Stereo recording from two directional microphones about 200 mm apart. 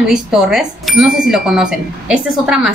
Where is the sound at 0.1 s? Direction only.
Centre (ahead or behind).